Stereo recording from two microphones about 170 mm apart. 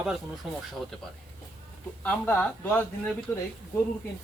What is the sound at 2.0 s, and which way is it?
Speech, 10° left (ahead or behind).